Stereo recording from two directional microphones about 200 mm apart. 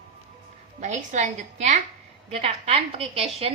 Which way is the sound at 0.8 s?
35° right (ahead or behind).